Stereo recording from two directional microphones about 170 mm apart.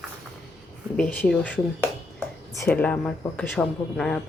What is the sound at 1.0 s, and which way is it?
Speech, 5° left (ahead or behind).